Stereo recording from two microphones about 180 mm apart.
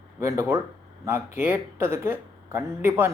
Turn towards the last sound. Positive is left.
turn(degrees=-15)  # may be behind; listen again after turning